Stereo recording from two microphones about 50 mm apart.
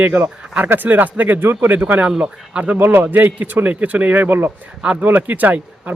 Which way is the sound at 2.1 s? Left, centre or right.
Right.